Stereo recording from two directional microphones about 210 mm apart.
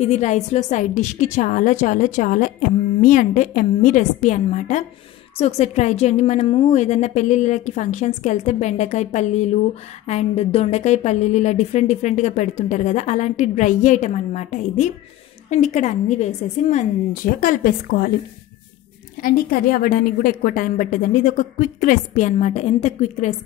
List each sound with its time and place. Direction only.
0.0 s a woman's voice: 35° left (ahead or behind)
19.2 s a woman's voice: 45° left (ahead or behind)